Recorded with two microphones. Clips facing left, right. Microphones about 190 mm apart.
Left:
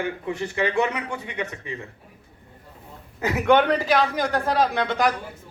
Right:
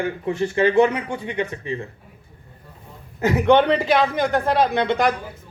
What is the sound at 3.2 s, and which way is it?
Speech, 20° right (ahead or behind).